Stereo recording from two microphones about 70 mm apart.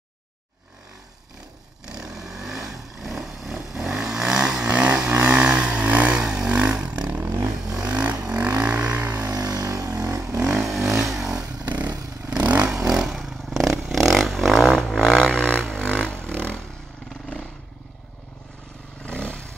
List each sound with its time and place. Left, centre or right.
1.9 s vehicle: centre; by 9.2 s right
9.3 s vehicle: right
10.6 s vehicle: centre
11.2 s motorcycle: right
12.3 s vehicle: centre
12.6 s vehicle: centre
15.6 s music: centre
19.0 s a sound: centre